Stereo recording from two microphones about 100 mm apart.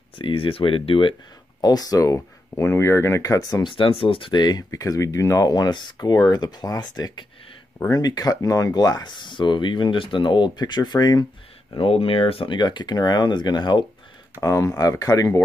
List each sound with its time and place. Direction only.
0.2 s speech: 60° left (ahead or behind)
1.6 s speech: 40° left (ahead or behind)
3.6 s speech: 60° left (ahead or behind)
4.3 s speech: 45° left (ahead or behind)
11.7 s speech: 70° left (ahead or behind)
12.5 s speech: 45° left (ahead or behind)
14.4 s speech: 30° left (ahead or behind)